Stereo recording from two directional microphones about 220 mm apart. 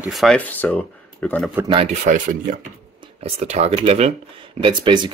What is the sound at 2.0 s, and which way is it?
Speech, 35° right (ahead or behind).